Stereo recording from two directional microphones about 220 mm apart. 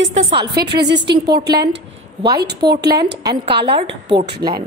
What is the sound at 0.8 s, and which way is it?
Speech, 50° right (ahead or behind).